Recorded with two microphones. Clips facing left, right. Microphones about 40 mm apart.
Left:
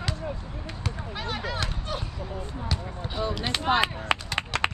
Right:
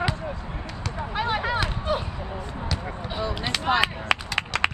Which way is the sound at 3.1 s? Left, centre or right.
Centre.